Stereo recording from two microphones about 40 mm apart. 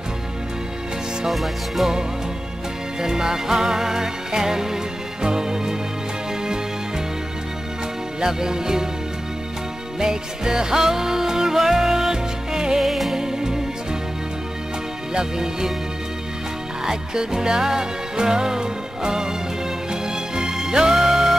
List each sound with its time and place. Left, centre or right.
1.2 s music: centre
3.0 s music: centre
8.2 s music: centre
9.9 s music: centre
12.8 s music: centre
13.2 s music: centre
15.1 s music: centre
16.8 s music: centre